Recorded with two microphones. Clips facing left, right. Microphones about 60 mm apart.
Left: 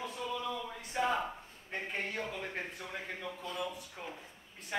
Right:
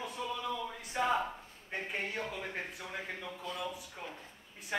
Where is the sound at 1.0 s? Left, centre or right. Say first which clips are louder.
Even; centre.